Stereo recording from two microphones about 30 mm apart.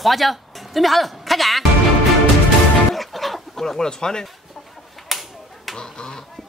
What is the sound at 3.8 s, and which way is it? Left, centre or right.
Speech, left.